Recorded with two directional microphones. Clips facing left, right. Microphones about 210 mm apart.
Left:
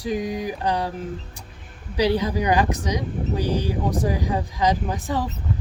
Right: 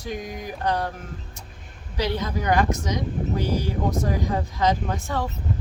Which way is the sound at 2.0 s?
10° left (ahead or behind).